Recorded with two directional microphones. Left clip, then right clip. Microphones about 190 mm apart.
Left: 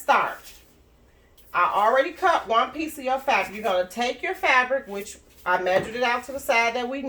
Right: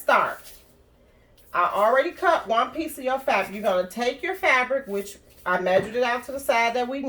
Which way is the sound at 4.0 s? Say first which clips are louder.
Even; 25° right (ahead or behind).